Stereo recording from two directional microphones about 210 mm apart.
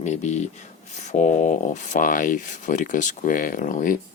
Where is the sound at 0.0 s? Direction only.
35° left (ahead or behind).